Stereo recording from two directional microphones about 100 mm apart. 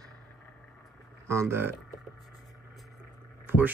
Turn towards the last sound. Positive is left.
turn(degrees=-20)  # may be behind; listen again after turning